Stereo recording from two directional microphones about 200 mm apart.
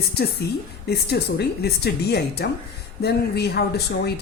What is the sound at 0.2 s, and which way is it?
A woman's voice, 55° left (ahead or behind).